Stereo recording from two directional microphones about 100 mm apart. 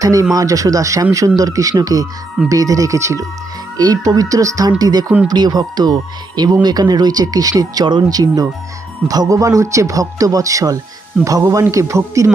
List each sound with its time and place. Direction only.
0.0 s speech: 35° right (ahead or behind)